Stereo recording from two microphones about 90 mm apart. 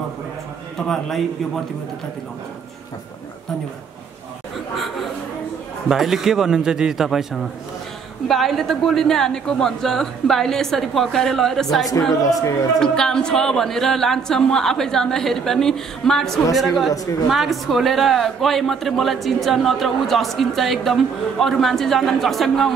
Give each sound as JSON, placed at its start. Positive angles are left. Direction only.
{"t": 0.7, "sound": "a man's voice", "side_deg": 5}
{"t": 5.9, "sound": "a woman's voice", "side_deg": -5}
{"t": 12.2, "sound": "speech", "side_deg": 40}
{"t": 12.7, "sound": "a woman's voice", "side_deg": 10}